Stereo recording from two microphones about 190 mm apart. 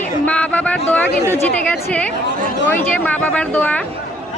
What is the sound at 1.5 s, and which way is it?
Speech, 5° left (ahead or behind).